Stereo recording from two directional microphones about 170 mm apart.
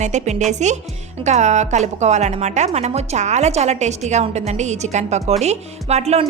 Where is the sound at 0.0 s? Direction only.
45° right (ahead or behind).